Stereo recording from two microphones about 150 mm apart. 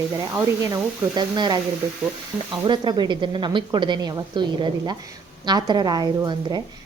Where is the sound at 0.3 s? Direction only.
20° right (ahead or behind).